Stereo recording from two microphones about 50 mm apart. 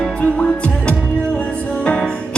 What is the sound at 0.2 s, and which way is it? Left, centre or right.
Music, left.